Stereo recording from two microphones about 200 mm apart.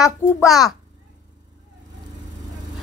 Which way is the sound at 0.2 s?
10° left (ahead or behind).